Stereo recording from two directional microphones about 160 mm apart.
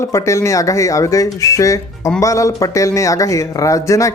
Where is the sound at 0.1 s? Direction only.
20° left (ahead or behind).